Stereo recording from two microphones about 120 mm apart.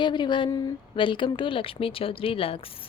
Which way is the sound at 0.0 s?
40° left (ahead or behind).